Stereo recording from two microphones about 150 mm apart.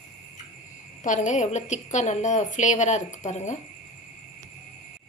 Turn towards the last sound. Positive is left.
turn(degrees=50)  # may be behind; listen again after turning